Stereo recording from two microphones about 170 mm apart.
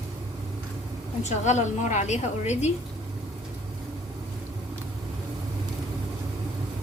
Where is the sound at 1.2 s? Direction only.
45° left (ahead or behind).